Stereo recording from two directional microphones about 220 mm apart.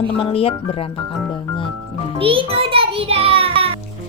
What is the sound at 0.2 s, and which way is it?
Speech, 25° left (ahead or behind).